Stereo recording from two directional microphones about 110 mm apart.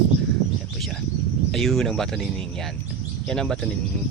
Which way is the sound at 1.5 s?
5° left (ahead or behind).